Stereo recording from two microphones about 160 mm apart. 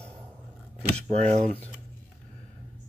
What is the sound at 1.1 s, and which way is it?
Speech, 40° right (ahead or behind).